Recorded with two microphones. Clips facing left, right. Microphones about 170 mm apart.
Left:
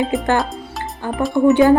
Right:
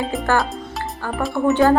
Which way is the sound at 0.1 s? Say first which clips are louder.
Left 4 dB; centre (ahead or behind).